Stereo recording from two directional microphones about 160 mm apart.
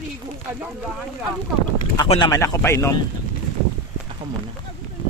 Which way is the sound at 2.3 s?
20° left (ahead or behind).